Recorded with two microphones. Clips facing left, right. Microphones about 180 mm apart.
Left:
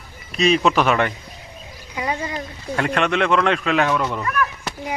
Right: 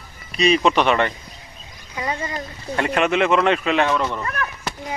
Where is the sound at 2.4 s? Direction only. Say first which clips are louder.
Even; centre (ahead or behind).